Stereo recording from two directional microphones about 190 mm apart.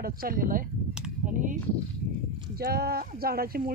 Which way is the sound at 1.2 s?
45° right (ahead or behind).